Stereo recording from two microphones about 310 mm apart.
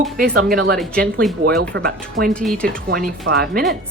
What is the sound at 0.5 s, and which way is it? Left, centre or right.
Speech, right.